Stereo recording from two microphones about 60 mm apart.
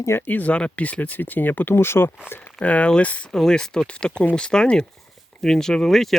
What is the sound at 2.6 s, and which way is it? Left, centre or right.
Speech, left.